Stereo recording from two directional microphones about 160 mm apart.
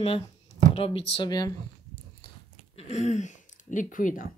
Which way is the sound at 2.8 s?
45° left (ahead or behind).